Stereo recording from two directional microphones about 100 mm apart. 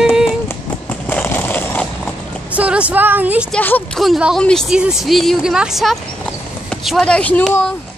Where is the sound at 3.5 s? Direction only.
15° left (ahead or behind).